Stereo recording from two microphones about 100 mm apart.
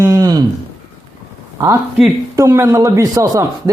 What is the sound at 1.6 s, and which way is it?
Speech, 35° right (ahead or behind).